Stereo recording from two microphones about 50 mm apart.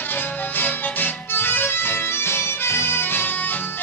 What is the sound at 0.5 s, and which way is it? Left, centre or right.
Music, left.